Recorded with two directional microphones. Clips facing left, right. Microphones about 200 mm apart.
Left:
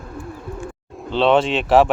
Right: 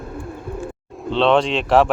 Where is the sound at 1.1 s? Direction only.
Centre (ahead or behind).